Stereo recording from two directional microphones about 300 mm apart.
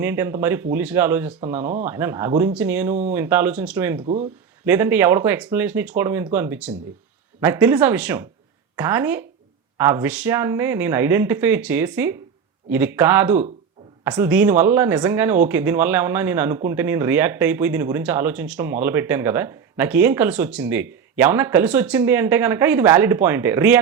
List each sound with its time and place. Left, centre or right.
0.0 s speech: centre
4.0 s speech: right
4.6 s speech: centre